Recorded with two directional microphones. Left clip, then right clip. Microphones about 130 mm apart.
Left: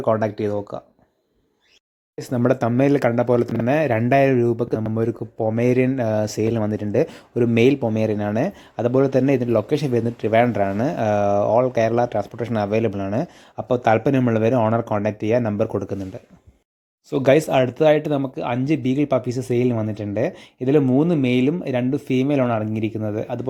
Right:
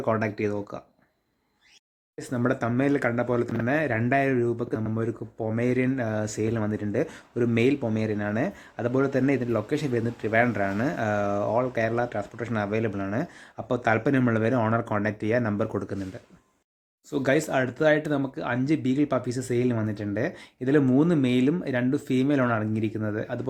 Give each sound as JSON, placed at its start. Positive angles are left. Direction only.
{"t": 0.0, "sound": "speech", "side_deg": 20}
{"t": 2.1, "sound": "speech", "side_deg": 40}
{"t": 17.1, "sound": "speech", "side_deg": 40}